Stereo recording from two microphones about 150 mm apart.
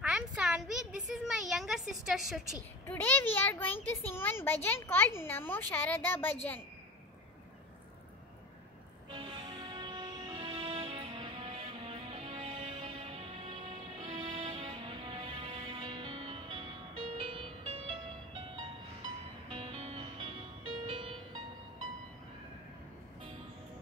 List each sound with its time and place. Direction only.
0.0 s a sound: 5° right (ahead or behind)
2.9 s a child's voice: 15° left (ahead or behind)
9.8 s music: 30° right (ahead or behind)
19.5 s music: 40° right (ahead or behind)